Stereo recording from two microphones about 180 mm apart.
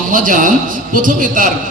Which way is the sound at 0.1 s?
50° right (ahead or behind).